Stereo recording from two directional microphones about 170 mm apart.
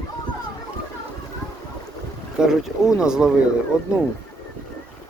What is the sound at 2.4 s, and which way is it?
Speech, 5° right (ahead or behind).